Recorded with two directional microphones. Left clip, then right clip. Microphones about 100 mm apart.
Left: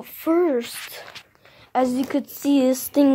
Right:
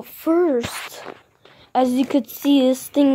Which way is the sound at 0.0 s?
35° right (ahead or behind).